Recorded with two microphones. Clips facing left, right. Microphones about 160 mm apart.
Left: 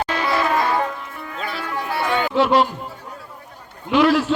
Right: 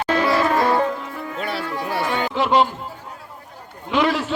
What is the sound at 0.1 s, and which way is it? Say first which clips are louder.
Music: right 5 dB; 40° right (ahead or behind).